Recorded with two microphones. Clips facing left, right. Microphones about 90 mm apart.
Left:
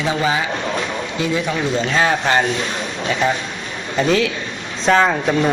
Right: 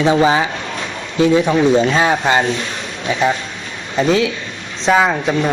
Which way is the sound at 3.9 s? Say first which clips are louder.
Right 2 dB; 5° right (ahead or behind).